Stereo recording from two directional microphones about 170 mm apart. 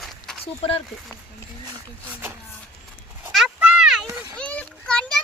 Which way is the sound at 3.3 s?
5° right (ahead or behind).